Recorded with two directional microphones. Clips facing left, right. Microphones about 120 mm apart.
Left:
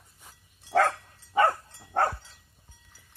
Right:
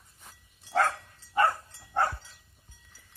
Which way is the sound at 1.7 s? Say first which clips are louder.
Left 2 dB; 55° left (ahead or behind).